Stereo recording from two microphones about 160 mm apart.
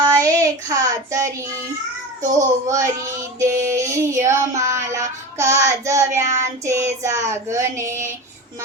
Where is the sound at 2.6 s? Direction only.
20° right (ahead or behind).